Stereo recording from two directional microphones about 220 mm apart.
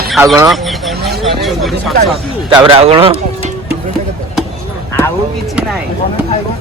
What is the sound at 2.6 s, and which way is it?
Speech, 25° right (ahead or behind).